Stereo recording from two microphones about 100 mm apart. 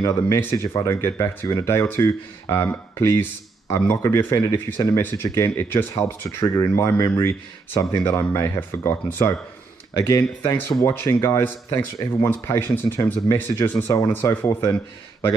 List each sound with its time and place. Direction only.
0.1 s speech: 20° left (ahead or behind)
2.7 s speech: 25° left (ahead or behind)
6.4 s speech: 35° left (ahead or behind)
10.4 s speech: 25° left (ahead or behind)